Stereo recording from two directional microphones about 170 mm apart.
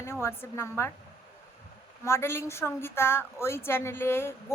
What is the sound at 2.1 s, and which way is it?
A woman's voice, 15° left (ahead or behind).